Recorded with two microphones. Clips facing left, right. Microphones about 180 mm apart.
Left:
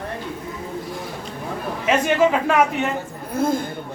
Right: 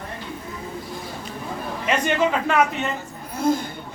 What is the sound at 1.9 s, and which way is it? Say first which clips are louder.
Speech: left 4 dB; 5° left (ahead or behind).